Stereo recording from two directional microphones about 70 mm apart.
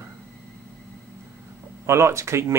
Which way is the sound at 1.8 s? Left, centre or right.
Right.